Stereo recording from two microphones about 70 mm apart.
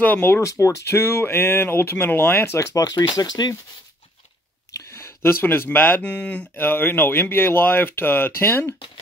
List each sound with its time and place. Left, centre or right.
0.0 s speech: left
0.4 s speech: left
2.8 s speech: left
4.9 s speech: left
6.0 s speech: centre
6.5 s speech: left